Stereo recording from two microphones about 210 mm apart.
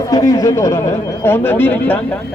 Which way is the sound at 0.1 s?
15° left (ahead or behind).